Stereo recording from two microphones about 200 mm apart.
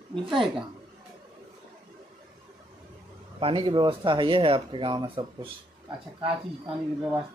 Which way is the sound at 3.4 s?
25° right (ahead or behind).